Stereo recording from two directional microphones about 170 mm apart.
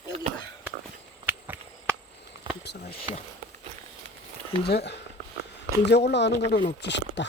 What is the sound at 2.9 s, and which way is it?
Speech, 35° left (ahead or behind).